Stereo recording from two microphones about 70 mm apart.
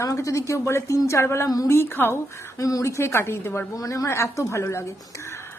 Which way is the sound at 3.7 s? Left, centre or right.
Left.